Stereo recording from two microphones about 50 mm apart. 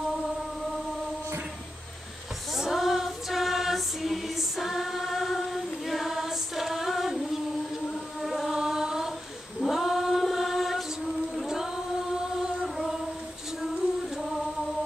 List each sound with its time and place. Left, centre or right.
2.5 s music: centre
8.2 s music: centre
9.6 s choir: centre
11.4 s singing: centre